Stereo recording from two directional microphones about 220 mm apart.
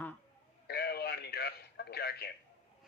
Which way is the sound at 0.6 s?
45° left (ahead or behind).